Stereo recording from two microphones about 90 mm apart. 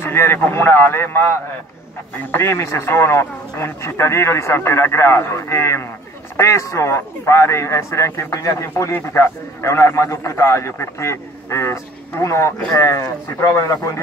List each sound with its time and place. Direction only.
0.0 s a man's voice: 25° left (ahead or behind)